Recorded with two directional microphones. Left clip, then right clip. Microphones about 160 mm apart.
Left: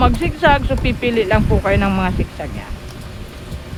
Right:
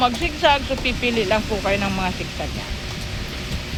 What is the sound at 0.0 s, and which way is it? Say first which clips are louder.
Speech: left 3 dB; 50° left (ahead or behind).